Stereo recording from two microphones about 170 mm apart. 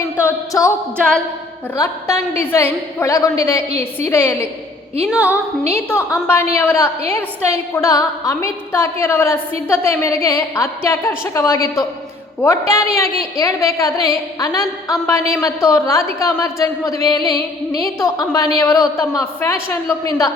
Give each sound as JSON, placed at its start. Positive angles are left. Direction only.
{"t": 0.2, "sound": "a woman's voice", "side_deg": 15}
{"t": 1.7, "sound": "a woman's voice", "side_deg": 20}
{"t": 5.0, "sound": "a woman's voice", "side_deg": -5}
{"t": 5.9, "sound": "a woman's voice", "side_deg": 15}